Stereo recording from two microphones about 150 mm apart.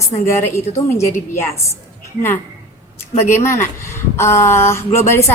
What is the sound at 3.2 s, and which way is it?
A woman's voice, 15° left (ahead or behind).